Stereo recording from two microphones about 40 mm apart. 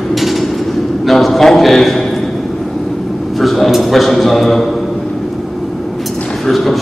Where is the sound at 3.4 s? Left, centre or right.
Centre.